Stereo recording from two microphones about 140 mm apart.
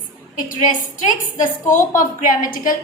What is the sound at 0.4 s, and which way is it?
A woman's voice, 75° left (ahead or behind).